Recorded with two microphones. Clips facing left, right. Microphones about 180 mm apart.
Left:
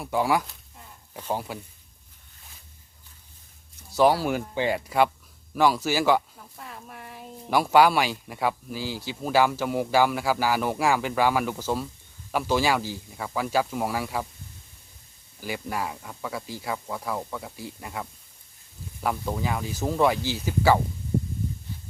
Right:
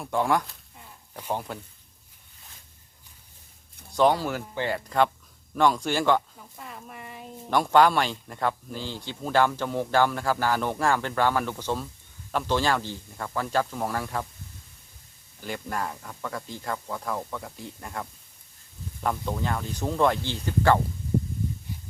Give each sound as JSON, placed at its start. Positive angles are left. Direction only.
{"t": 0.0, "sound": "speech", "side_deg": 5}
{"t": 3.9, "sound": "speech", "side_deg": 5}
{"t": 15.4, "sound": "speech", "side_deg": 5}